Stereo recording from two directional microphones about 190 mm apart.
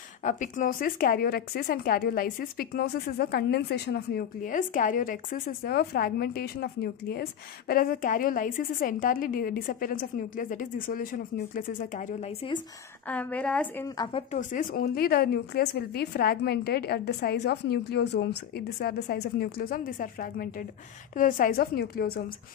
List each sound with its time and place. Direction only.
0.2 s a woman's voice: 40° left (ahead or behind)
13.1 s a woman's voice: 5° left (ahead or behind)
13.9 s speech: 25° left (ahead or behind)
14.5 s a woman's voice: 50° left (ahead or behind)